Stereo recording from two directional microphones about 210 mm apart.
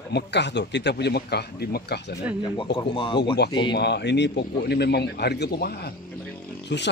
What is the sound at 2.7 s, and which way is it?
Speech, 25° left (ahead or behind).